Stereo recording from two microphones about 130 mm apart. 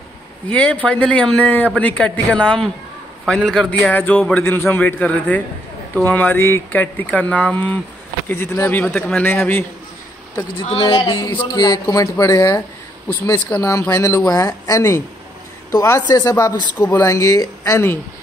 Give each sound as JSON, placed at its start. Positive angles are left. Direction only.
{"t": 0.5, "sound": "a man's voice", "side_deg": 10}
{"t": 8.8, "sound": "a man's voice", "side_deg": 5}
{"t": 9.2, "sound": "a man's voice", "side_deg": 15}
{"t": 10.6, "sound": "speech", "side_deg": 45}